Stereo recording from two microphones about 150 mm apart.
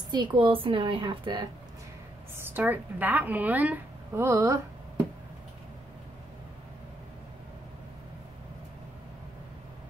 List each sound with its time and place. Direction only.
0.1 s a woman's voice: 30° right (ahead or behind)
2.3 s a woman's voice: 15° right (ahead or behind)